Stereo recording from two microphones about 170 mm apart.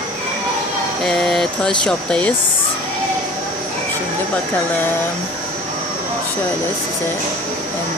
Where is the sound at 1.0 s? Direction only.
Centre (ahead or behind).